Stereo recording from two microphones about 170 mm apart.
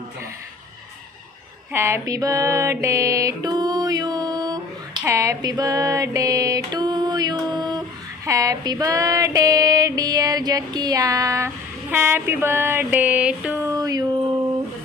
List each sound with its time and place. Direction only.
1.7 s music: 15° right (ahead or behind)
5.0 s a sound: 20° right (ahead or behind)
8.2 s female singing: 20° right (ahead or behind)